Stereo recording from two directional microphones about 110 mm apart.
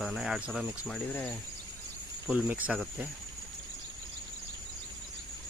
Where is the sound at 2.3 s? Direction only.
15° right (ahead or behind).